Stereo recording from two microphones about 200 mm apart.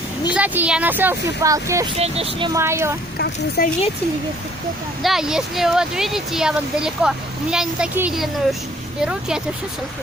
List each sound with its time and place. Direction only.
0.3 s speech: 10° right (ahead or behind)
2.0 s speech: 30° right (ahead or behind)
2.5 s speech: 15° right (ahead or behind)
3.6 s speech: 50° left (ahead or behind)
5.0 s speech: centre (ahead or behind)